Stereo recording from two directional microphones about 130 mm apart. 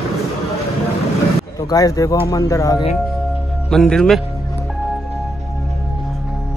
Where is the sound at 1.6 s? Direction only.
30° left (ahead or behind).